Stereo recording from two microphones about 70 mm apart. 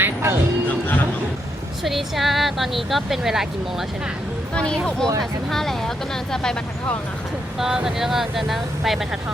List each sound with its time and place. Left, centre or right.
0.0 s music: right
0.7 s music: left
1.8 s speech: centre
5.5 s speech: centre
7.6 s speech: centre